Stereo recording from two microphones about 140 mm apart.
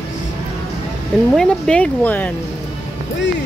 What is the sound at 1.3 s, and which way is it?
Speech, 5° left (ahead or behind).